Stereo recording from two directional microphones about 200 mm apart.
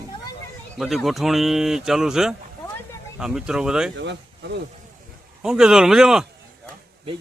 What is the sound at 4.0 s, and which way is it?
Speech, 60° right (ahead or behind).